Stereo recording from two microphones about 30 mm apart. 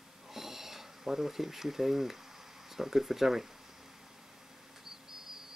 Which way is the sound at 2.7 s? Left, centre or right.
Centre.